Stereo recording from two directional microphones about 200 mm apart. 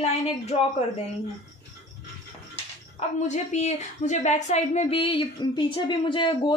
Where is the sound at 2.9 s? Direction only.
35° left (ahead or behind).